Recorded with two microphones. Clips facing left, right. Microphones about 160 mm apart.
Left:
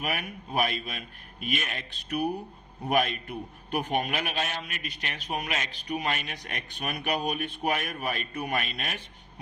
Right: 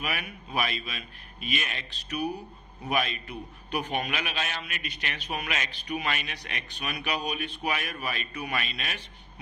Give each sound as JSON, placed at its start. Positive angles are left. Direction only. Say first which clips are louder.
{"t": 0.0, "sound": "a man's voice", "louder": "left 2 dB", "side_deg": 45}